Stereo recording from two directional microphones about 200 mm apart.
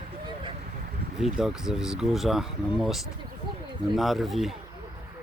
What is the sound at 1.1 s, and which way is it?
Speech, centre (ahead or behind).